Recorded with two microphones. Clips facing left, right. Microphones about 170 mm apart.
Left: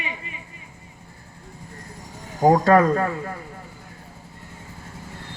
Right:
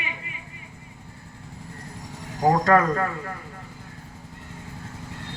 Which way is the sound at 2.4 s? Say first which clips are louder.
Left 3 dB; 25° left (ahead or behind).